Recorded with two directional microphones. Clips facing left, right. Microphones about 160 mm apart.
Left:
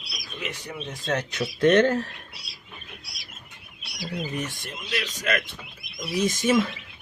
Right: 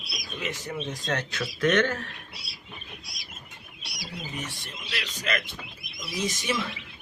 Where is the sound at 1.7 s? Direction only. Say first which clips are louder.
Left 6 dB; 35° left (ahead or behind).